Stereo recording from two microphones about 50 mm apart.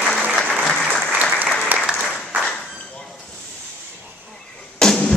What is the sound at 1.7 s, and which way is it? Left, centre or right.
Applause, right.